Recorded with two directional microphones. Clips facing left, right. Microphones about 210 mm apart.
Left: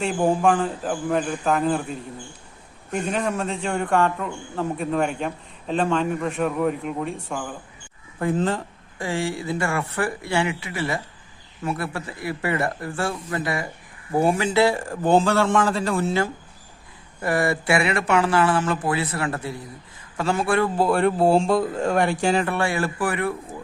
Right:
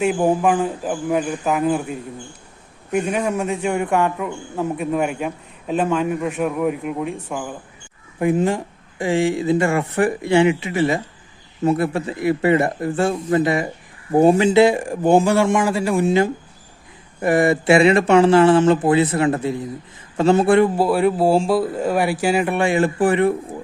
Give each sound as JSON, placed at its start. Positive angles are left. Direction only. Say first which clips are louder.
{"t": 0.0, "sound": "speech", "louder": "right 3 dB", "side_deg": -5}
{"t": 8.2, "sound": "speech", "louder": "right 5 dB", "side_deg": -15}
{"t": 20.7, "sound": "speech", "louder": "right 3 dB", "side_deg": -5}